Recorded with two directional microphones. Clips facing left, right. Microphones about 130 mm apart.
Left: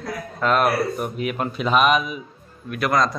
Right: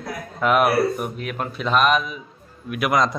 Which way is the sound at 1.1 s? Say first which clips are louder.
Left 3 dB; 5° left (ahead or behind).